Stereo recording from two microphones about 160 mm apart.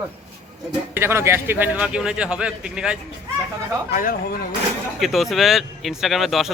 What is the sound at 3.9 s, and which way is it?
Speech, 60° left (ahead or behind).